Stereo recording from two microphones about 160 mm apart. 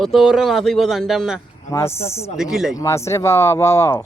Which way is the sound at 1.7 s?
15° left (ahead or behind).